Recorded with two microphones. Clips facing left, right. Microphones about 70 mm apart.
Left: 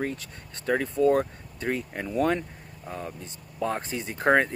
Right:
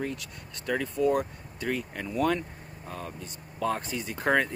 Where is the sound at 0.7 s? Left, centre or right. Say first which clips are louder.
Left 4 dB; left.